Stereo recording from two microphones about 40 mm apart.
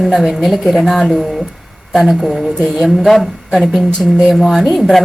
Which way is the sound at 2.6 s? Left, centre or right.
Centre.